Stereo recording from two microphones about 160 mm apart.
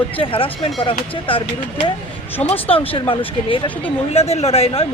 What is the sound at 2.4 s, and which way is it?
Speech, 35° left (ahead or behind).